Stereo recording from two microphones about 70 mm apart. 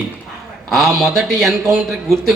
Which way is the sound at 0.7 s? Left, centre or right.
Centre.